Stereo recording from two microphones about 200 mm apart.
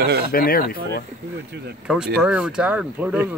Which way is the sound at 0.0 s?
55° right (ahead or behind).